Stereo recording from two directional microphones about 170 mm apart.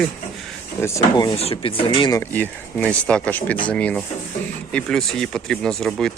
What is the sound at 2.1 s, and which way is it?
Speech, 15° left (ahead or behind).